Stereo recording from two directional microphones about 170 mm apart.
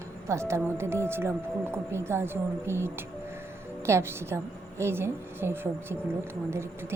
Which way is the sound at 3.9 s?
15° right (ahead or behind).